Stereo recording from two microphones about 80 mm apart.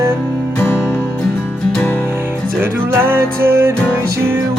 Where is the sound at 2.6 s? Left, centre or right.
Right.